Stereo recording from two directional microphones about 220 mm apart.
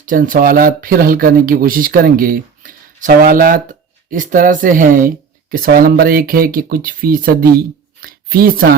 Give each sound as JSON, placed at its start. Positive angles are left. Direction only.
{"t": 0.0, "sound": "speech", "side_deg": -40}